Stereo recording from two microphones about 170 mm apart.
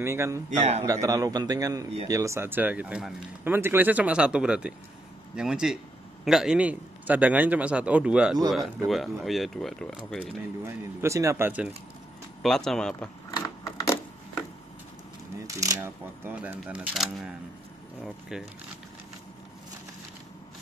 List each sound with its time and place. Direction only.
0.0 s a man's voice: 15° right (ahead or behind)
0.5 s a man's voice: 45° right (ahead or behind)
0.8 s a man's voice: 20° right (ahead or behind); by 9.9 s centre (ahead or behind)
10.6 s a man's voice: 15° right (ahead or behind)
12.4 s speech: centre (ahead or behind)
15.4 s a man's voice: 20° right (ahead or behind); by 17.3 s 5° right (ahead or behind)
18.3 s speech: 5° right (ahead or behind)